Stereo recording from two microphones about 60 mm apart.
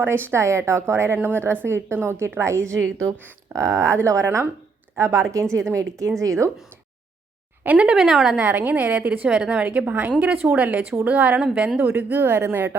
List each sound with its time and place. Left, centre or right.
0.0 s a woman's voice: right
7.6 s a woman's voice: right
7.9 s a woman's voice: centre
8.4 s a woman's voice: right
12.2 s speech: right